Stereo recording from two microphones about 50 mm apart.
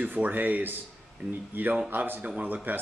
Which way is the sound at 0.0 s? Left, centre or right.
Right.